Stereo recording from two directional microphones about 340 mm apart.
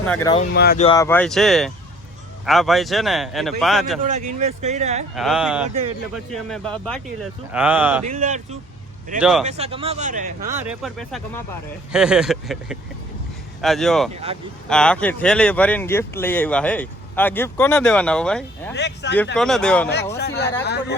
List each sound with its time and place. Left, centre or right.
0.0 s speech: centre
0.5 s speech: left
0.9 s speech: centre
4.0 s speech: right
5.1 s speech: centre
8.1 s speech: centre
10.6 s speech: centre
18.7 s speech: left
19.4 s speech: centre
20.1 s speech: left